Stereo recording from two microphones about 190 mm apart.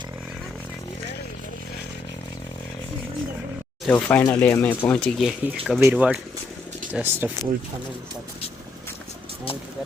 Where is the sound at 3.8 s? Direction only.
10° left (ahead or behind); by 7.3 s 10° right (ahead or behind).